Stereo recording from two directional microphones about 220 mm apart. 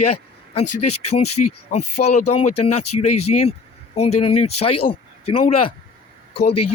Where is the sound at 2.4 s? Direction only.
90° left.